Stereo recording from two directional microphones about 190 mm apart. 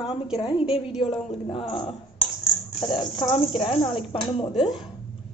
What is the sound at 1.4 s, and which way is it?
A woman's voice, 25° left (ahead or behind).